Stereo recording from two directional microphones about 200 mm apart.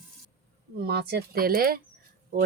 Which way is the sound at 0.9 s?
55° right (ahead or behind).